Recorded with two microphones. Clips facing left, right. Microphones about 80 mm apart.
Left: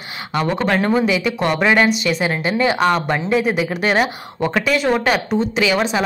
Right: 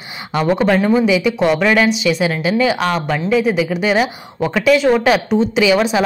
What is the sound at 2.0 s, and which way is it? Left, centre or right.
Speech, centre.